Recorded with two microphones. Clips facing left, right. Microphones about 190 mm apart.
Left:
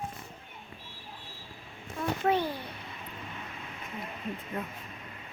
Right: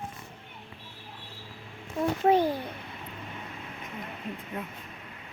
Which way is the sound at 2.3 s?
45° right (ahead or behind).